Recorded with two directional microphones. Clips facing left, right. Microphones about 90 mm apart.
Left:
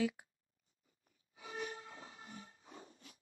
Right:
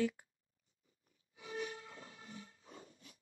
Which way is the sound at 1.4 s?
35° left (ahead or behind).